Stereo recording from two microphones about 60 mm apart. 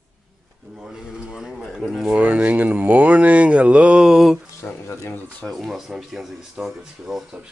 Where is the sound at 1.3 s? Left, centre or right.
Centre.